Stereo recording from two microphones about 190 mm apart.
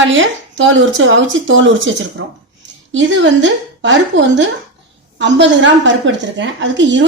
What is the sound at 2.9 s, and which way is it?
A woman's voice, 75° right (ahead or behind).